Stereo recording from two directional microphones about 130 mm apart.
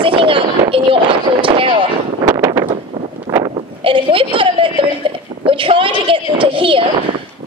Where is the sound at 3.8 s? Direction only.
45° right (ahead or behind).